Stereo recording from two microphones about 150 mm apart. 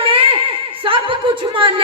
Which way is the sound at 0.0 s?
35° right (ahead or behind).